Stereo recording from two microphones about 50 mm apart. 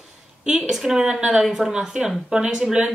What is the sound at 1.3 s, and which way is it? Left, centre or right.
Speech, centre.